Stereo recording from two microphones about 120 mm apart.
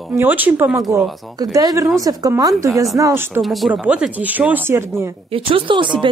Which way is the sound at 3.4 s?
Centre (ahead or behind).